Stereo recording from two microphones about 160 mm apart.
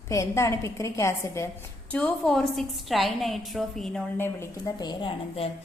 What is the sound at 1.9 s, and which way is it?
A woman's voice, 5° left (ahead or behind).